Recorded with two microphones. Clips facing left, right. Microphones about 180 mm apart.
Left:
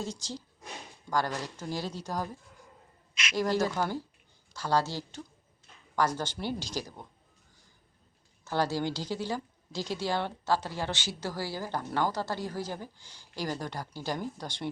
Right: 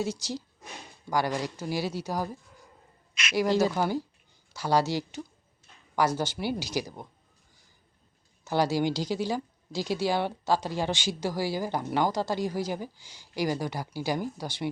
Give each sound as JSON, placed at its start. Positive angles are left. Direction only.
{"t": 0.0, "sound": "a woman's voice", "side_deg": -5}
{"t": 3.3, "sound": "a woman's voice", "side_deg": -10}
{"t": 8.4, "sound": "a woman's voice", "side_deg": -10}